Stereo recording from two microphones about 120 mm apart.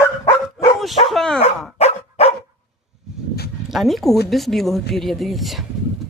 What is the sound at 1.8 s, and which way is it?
Dog, 60° left (ahead or behind).